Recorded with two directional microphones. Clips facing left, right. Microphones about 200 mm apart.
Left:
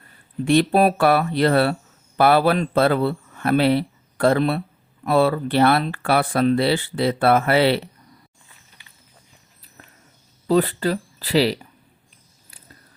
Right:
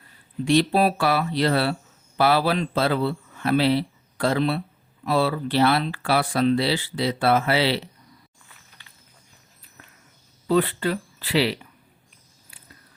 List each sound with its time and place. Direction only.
0.4 s a man's voice: 55° left (ahead or behind)
10.4 s speech: 40° left (ahead or behind)